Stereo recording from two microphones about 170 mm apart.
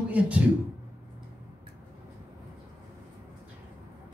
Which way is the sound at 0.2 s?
10° right (ahead or behind).